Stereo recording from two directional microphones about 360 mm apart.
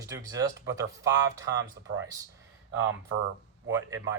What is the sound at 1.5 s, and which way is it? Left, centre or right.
Speech, right.